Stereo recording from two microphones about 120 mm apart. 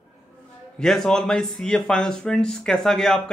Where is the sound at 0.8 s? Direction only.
5° left (ahead or behind).